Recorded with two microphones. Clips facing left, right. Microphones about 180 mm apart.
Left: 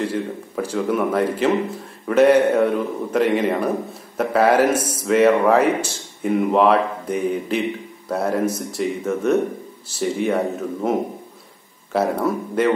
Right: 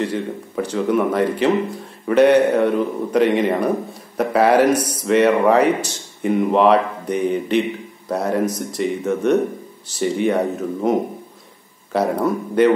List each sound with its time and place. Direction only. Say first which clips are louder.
0.0 s a man's voice: right 1 dB; 5° left (ahead or behind)
4.6 s speech: right 2 dB; 25° left (ahead or behind)
5.0 s a man's voice: even; centre (ahead or behind)